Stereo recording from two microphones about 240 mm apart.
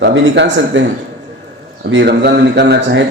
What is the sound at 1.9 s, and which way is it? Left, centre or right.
Speech, right.